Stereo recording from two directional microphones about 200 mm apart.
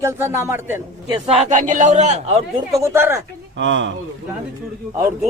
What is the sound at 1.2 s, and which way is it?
A man's voice, 30° right (ahead or behind).